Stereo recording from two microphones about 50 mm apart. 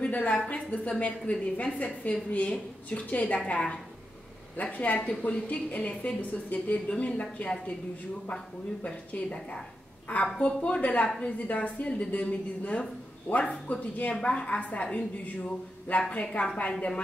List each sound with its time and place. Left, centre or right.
0.0 s a woman's voice: left
4.6 s a woman's voice: left
8.8 s a woman's voice: left
13.7 s a woman's voice: left